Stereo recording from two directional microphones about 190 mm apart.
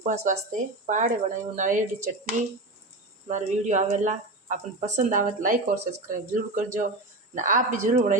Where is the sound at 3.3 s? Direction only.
40° right (ahead or behind).